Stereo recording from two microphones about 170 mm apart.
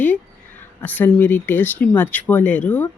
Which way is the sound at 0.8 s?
10° left (ahead or behind).